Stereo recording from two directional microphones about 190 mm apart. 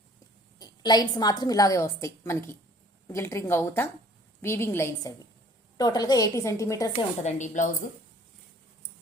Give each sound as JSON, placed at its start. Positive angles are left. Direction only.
{"t": 0.6, "sound": "a woman's voice", "side_deg": 20}
{"t": 6.9, "sound": "a woman's voice", "side_deg": 35}